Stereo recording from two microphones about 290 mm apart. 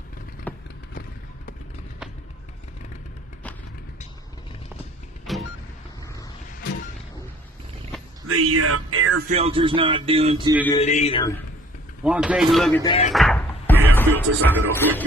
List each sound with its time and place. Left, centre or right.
0.5 s clip-clop: centre
5.2 s vehicle: centre
8.3 s music: right
9.3 s speech: centre
10.7 s male singing: left
12.0 s speech: centre
12.8 s speech: centre
13.1 s music: centre